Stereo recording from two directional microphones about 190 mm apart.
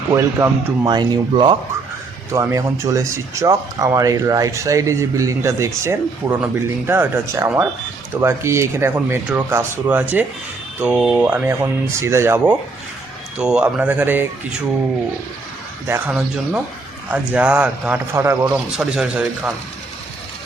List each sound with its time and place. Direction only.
0.1 s speech: 15° right (ahead or behind)
15.9 s speech: 10° right (ahead or behind)
18.8 s speech: 5° right (ahead or behind)